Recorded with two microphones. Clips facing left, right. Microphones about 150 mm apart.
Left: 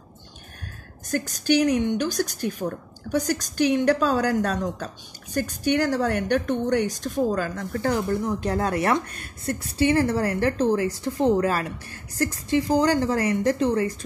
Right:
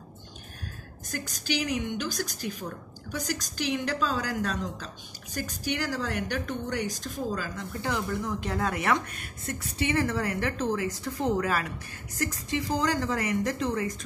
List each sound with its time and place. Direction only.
1.1 s a woman's voice: 55° left (ahead or behind); by 13.9 s 30° left (ahead or behind)